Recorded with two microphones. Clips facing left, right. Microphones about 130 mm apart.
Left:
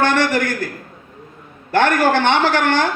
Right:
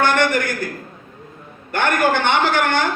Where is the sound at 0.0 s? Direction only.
90° left.